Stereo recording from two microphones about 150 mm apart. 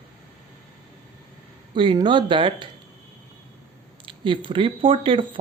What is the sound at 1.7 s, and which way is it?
Speech, 35° right (ahead or behind).